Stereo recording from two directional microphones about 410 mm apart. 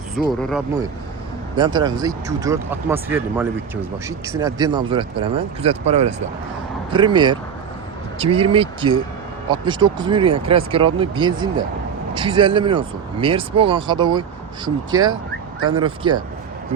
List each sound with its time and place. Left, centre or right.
0.2 s speech: centre
15.7 s speech: centre